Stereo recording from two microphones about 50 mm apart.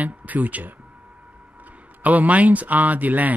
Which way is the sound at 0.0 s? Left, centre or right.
Right.